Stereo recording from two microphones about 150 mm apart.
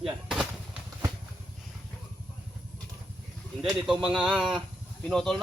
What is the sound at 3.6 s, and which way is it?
Speech, 5° right (ahead or behind).